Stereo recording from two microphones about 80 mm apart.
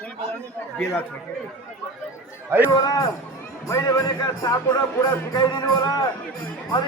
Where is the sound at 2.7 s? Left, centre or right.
Left.